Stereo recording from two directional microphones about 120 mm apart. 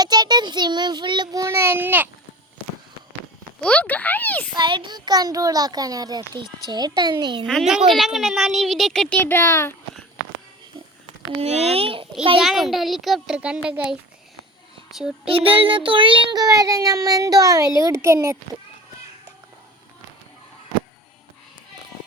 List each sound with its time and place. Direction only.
0.0 s child singing: 35° right (ahead or behind); by 2.0 s 15° right (ahead or behind)
3.6 s a sound: 10° left (ahead or behind)
4.5 s a child's voice: 45° right (ahead or behind)
7.4 s a child's voice: centre (ahead or behind); by 9.7 s 25° left (ahead or behind)
11.3 s speech: 60° right (ahead or behind)
12.4 s a child's voice: centre (ahead or behind)
15.3 s a child's voice: 50° right (ahead or behind); by 18.3 s 25° right (ahead or behind)